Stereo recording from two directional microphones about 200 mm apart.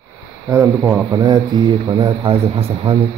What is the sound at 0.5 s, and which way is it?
A man's voice, 15° right (ahead or behind).